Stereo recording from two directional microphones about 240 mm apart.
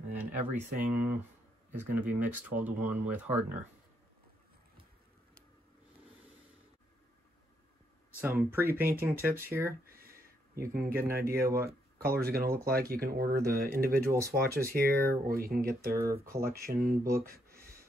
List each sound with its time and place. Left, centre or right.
0.6 s speech: centre
8.2 s speech: centre
9.7 s a sound: right
11.3 s speech: right
14.1 s speech: centre
14.9 s speech: right
15.9 s speech: centre
16.4 s speech: right